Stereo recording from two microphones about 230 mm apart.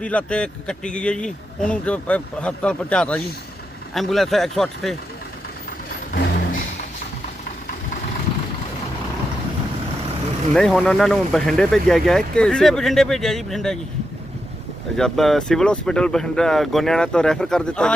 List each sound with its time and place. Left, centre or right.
0.0 s speech: centre
5.9 s vehicle: left
10.5 s speech: centre
14.9 s speech: centre